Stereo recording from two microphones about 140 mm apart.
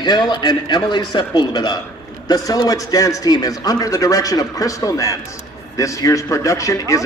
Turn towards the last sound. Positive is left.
turn(degrees=20)  # may be behind; listen again after turning